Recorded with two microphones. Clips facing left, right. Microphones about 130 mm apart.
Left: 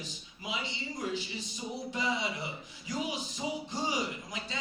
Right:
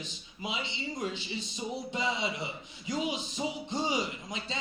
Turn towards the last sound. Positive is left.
turn(degrees=-20)  # may be behind; listen again after turning